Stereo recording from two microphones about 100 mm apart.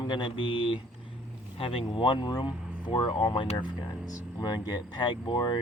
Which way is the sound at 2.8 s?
65° left (ahead or behind).